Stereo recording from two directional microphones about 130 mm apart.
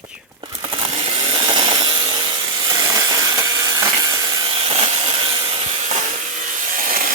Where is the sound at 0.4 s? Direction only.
40° right (ahead or behind).